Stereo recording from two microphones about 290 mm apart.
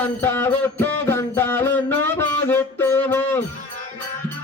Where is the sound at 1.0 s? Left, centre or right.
Centre.